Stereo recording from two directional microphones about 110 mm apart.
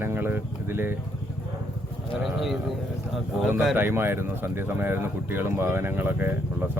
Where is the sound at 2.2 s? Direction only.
Centre (ahead or behind).